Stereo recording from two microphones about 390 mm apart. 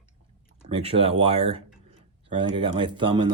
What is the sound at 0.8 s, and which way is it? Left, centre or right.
Speech, centre.